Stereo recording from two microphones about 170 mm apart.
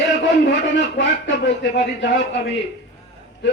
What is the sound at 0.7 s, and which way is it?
Speech, 90° left.